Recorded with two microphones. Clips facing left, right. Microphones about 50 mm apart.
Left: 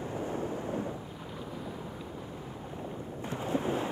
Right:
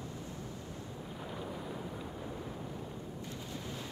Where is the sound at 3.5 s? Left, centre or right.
Left.